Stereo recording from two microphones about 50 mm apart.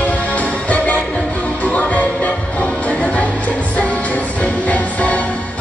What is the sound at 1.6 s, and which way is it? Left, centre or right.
Music, left.